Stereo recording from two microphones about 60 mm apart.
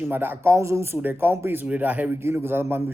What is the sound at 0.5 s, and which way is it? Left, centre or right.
Speech, right.